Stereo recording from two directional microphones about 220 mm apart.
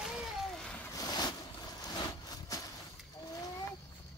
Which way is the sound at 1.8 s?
15° left (ahead or behind).